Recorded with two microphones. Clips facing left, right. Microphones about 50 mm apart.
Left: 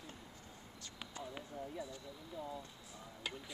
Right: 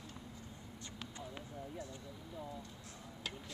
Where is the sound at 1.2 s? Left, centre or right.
Centre.